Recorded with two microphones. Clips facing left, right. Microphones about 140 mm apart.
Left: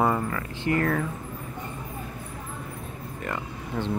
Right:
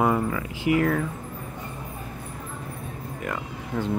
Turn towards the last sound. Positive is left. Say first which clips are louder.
# right 2 dB
turn(degrees=-5)  # may be behind; listen again after turning